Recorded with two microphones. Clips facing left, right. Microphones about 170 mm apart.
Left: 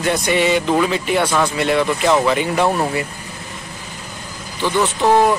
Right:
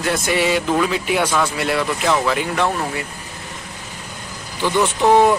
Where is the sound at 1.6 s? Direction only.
Centre (ahead or behind).